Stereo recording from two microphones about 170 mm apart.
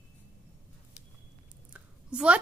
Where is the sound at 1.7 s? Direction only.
5° right (ahead or behind).